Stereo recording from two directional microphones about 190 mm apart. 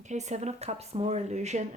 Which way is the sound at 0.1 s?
35° right (ahead or behind).